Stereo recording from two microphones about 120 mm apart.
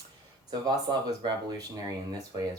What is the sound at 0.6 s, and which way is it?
Speech, 35° right (ahead or behind).